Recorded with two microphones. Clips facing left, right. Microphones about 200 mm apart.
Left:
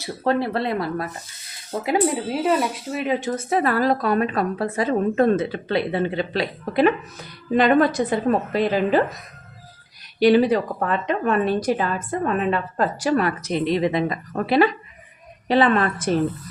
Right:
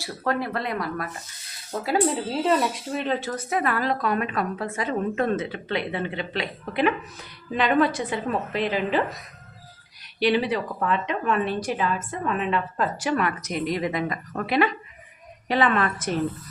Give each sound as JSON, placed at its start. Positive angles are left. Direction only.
{"t": 0.0, "sound": "speech", "side_deg": 30}
{"t": 1.7, "sound": "speech", "side_deg": 15}
{"t": 3.2, "sound": "speech", "side_deg": 20}
{"t": 3.5, "sound": "a woman's voice", "side_deg": 35}
{"t": 10.2, "sound": "a woman's voice", "side_deg": 45}